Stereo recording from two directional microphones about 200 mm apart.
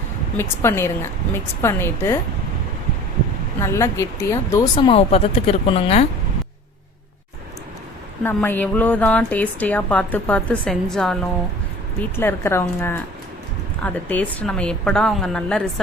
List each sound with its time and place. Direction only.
0.3 s a woman's voice: 10° left (ahead or behind)
3.6 s a woman's voice: 15° left (ahead or behind)
4.9 s a woman's voice: 30° left (ahead or behind)
8.2 s a woman's voice: 10° left (ahead or behind)